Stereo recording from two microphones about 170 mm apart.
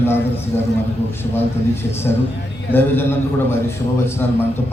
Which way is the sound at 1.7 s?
15° left (ahead or behind).